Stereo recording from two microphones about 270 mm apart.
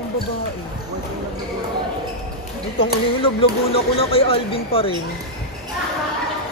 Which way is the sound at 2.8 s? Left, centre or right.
Centre.